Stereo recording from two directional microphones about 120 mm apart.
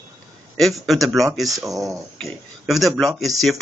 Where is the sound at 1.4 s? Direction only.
30° right (ahead or behind).